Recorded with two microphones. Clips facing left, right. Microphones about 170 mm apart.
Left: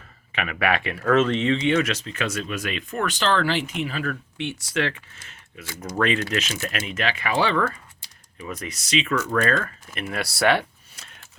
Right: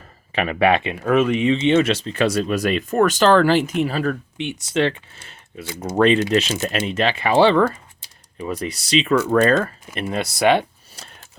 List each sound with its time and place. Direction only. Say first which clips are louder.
0.3 s speech: right 7 dB; 30° right (ahead or behind); by 1.5 s 15° right (ahead or behind)
1.5 s speech: right 5 dB; 25° right (ahead or behind)
4.4 s speech: right 4 dB; 20° right (ahead or behind)
11.0 s a sound: right 6 dB; 35° right (ahead or behind)